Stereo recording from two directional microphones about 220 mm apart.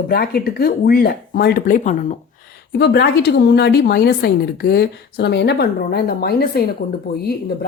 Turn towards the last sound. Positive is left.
turn(degrees=45)  # may be behind; listen again after turning